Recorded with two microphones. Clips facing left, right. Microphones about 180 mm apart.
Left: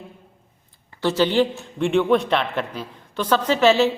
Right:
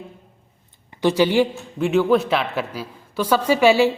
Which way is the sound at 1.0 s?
10° right (ahead or behind).